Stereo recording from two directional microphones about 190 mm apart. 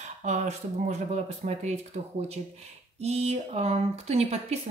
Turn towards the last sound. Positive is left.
turn(degrees=-35)  # may be behind; listen again after turning